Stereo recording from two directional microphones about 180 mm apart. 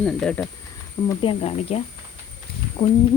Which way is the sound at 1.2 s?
35° left (ahead or behind).